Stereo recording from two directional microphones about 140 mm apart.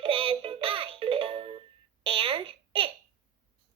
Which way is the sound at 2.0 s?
40° right (ahead or behind).